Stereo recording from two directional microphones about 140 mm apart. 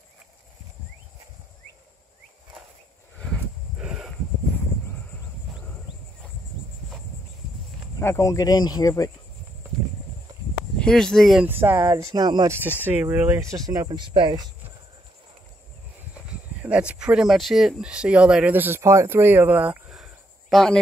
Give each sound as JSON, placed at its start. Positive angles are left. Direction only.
{"t": 3.7, "sound": "a sound", "side_deg": -5}
{"t": 8.0, "sound": "speech", "side_deg": 20}
{"t": 10.8, "sound": "speech", "side_deg": 5}
{"t": 11.4, "sound": "speech", "side_deg": -15}
{"t": 12.5, "sound": "speech", "side_deg": -15}
{"t": 16.3, "sound": "speech", "side_deg": -10}